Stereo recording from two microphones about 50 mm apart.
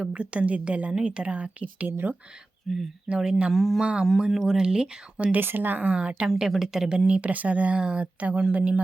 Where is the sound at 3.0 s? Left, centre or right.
Centre.